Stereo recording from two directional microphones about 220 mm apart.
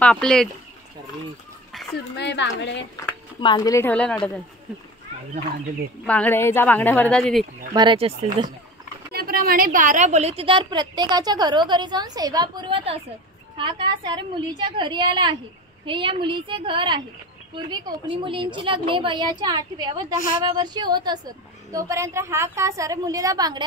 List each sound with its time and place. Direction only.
0.0 s speech: 5° left (ahead or behind)
2.1 s a woman's voice: 50° left (ahead or behind)
3.0 s speech: 15° left (ahead or behind)
6.0 s speech: 5° left (ahead or behind)
7.7 s a woman's voice: 20° right (ahead or behind)
9.1 s a woman's voice: 40° right (ahead or behind); by 23.6 s 15° right (ahead or behind)